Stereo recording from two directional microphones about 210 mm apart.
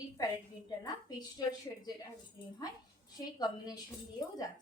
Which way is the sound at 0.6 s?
20° left (ahead or behind).